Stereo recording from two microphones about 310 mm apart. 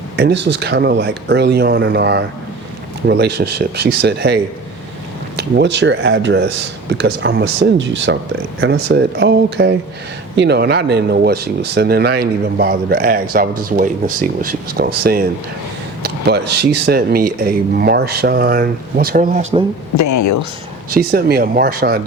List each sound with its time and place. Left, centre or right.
0.2 s speech: right
5.4 s speech: right
20.0 s speech: left
20.9 s speech: right